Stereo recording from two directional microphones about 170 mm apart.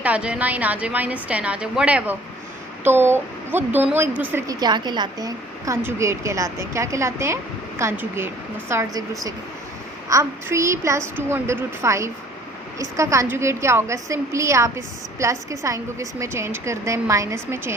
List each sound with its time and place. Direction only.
0.0 s a woman's voice: 5° right (ahead or behind)
4.6 s a woman's voice: 25° right (ahead or behind)